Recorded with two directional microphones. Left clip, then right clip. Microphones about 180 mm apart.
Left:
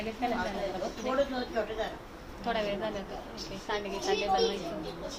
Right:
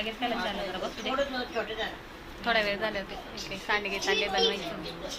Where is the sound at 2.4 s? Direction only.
10° right (ahead or behind).